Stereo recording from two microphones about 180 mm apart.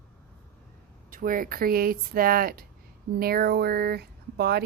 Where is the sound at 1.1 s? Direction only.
50° right (ahead or behind).